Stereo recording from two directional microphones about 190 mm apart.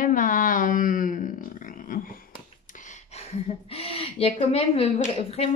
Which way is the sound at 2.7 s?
40° left (ahead or behind).